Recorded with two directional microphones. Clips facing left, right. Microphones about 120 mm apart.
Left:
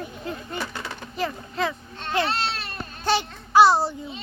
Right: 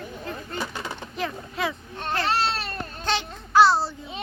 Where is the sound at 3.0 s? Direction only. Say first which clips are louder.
Left 5 dB; 10° left (ahead or behind).